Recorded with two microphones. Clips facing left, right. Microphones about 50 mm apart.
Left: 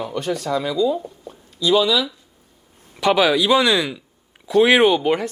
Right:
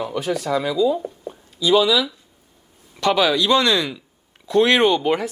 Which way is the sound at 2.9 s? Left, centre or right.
Centre.